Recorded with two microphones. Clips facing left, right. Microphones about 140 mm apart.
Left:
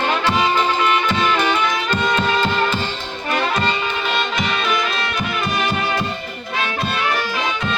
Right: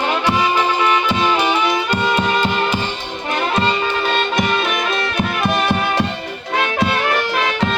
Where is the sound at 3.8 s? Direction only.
45° right (ahead or behind).